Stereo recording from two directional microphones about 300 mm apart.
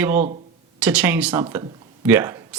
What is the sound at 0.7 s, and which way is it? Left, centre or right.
Speech, centre.